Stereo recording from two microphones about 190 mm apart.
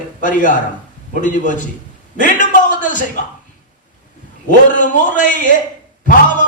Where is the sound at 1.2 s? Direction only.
40° left (ahead or behind).